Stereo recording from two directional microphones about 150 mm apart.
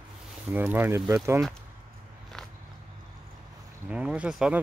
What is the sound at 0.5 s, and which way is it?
Speech, 10° right (ahead or behind).